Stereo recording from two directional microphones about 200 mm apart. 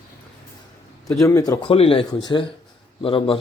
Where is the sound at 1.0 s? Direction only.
15° left (ahead or behind).